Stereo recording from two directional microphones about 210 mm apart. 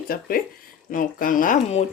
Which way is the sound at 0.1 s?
45° left (ahead or behind).